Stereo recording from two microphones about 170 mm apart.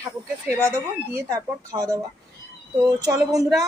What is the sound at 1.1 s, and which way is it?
Speech, 20° right (ahead or behind).